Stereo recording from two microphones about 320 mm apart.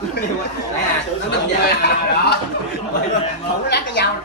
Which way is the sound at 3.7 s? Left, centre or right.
Left.